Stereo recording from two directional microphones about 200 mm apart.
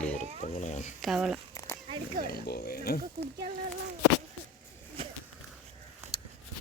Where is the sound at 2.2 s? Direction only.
50° left (ahead or behind).